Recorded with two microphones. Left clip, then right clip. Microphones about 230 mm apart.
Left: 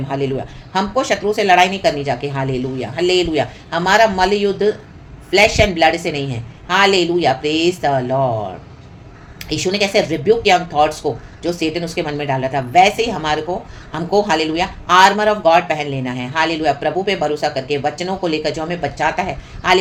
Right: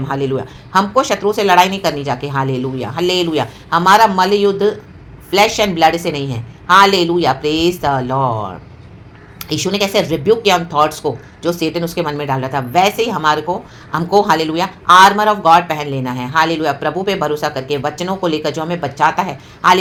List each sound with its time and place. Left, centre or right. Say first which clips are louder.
0.1 s speech: right 2 dB; right
9.4 s speech: right 1 dB; right